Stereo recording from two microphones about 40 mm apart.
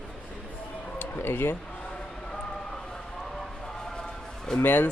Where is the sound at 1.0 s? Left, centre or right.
Left.